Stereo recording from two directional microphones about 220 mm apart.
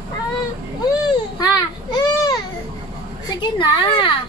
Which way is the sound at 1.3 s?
20° left (ahead or behind).